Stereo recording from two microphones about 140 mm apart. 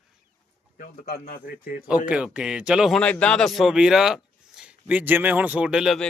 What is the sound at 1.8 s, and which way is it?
A man's voice, 5° right (ahead or behind).